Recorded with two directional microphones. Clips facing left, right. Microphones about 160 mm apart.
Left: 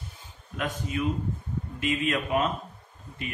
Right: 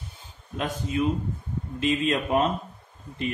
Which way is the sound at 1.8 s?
30° right (ahead or behind).